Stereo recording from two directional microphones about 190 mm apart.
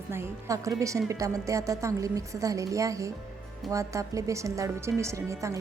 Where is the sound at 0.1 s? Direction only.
15° right (ahead or behind).